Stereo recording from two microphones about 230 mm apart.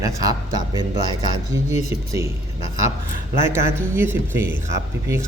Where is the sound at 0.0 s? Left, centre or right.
Centre.